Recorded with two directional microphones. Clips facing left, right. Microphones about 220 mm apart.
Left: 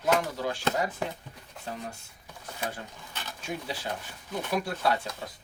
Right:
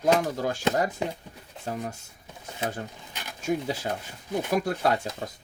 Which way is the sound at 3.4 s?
45° right (ahead or behind).